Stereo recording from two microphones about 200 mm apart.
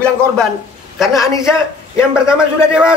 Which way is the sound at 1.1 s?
15° left (ahead or behind).